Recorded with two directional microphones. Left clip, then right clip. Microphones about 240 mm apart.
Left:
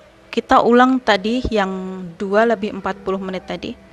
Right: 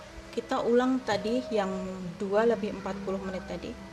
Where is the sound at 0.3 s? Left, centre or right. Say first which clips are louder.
Left 14 dB; left.